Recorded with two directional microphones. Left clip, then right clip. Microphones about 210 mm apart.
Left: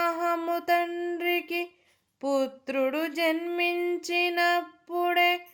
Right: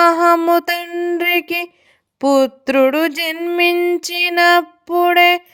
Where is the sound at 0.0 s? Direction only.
45° right (ahead or behind).